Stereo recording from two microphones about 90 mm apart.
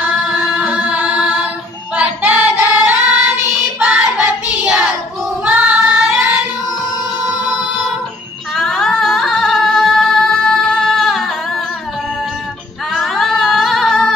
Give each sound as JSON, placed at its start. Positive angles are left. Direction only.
{"t": 0.0, "sound": "music", "side_deg": -10}
{"t": 2.0, "sound": "child singing", "side_deg": -20}
{"t": 5.4, "sound": "singing", "side_deg": -20}
{"t": 7.2, "sound": "music", "side_deg": 0}
{"t": 8.5, "sound": "singing", "side_deg": 5}
{"t": 12.9, "sound": "singing", "side_deg": 0}